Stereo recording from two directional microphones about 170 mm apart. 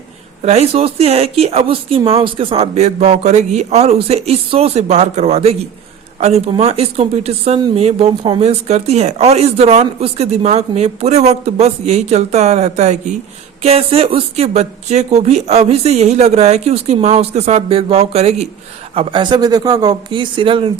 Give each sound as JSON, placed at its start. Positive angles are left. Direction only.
{"t": 0.4, "sound": "speech", "side_deg": -40}